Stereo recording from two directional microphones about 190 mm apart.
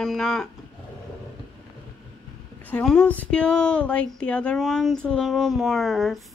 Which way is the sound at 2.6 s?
5° left (ahead or behind).